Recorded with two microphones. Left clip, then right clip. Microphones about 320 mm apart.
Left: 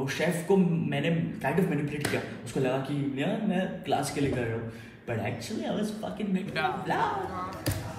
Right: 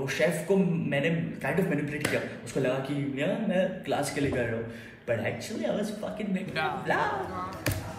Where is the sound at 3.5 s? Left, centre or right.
Centre.